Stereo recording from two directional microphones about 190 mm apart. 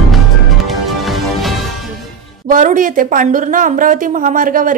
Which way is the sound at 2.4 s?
40° right (ahead or behind).